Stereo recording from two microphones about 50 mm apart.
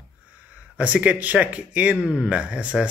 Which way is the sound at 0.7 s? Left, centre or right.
Right.